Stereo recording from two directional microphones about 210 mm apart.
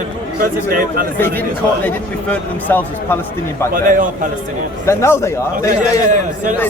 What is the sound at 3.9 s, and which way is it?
Speech, 40° right (ahead or behind).